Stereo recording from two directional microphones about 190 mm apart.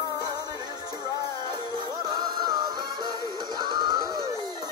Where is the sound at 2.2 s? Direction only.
20° right (ahead or behind).